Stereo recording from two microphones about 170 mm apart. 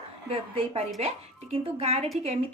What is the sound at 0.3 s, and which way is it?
A woman's voice, 35° right (ahead or behind).